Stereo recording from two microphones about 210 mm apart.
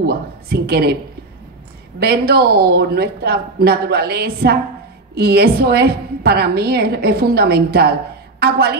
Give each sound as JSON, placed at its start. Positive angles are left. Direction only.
{"t": 0.0, "sound": "a woman's voice", "side_deg": -45}
{"t": 2.0, "sound": "a woman's voice", "side_deg": -50}